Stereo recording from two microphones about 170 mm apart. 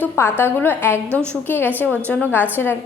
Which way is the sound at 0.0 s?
15° left (ahead or behind).